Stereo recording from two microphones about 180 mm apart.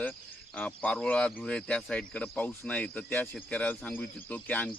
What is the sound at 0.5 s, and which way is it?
A man's voice, 10° left (ahead or behind).